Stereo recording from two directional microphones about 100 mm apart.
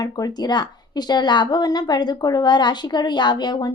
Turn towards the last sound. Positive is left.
turn(degrees=45)  # may be behind; listen again after turning